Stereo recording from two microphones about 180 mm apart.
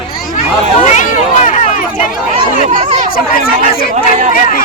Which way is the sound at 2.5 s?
40° right (ahead or behind).